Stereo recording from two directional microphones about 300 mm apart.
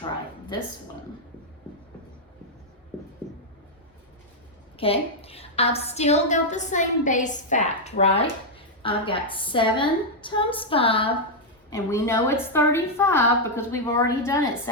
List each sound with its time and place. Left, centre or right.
4.8 s a woman's voice: centre